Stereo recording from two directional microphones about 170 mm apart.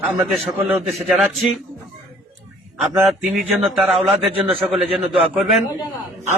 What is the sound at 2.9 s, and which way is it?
A man's voice, 5° right (ahead or behind).